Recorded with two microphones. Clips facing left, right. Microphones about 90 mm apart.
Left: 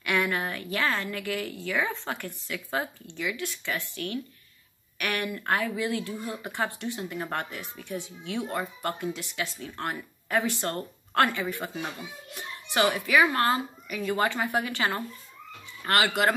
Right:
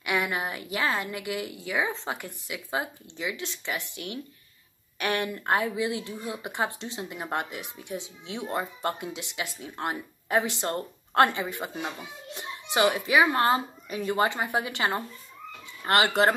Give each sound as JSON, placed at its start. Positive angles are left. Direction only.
{"t": 0.0, "sound": "a woman's voice", "side_deg": -10}